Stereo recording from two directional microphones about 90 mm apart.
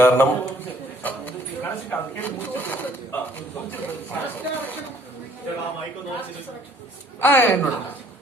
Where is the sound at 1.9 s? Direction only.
20° left (ahead or behind).